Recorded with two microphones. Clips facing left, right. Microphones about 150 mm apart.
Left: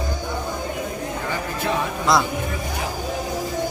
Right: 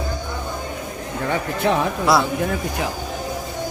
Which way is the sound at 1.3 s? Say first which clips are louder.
Right 6 dB; 60° right (ahead or behind).